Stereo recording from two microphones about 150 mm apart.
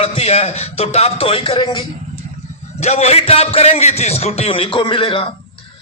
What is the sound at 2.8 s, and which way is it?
A man's voice, 45° left (ahead or behind).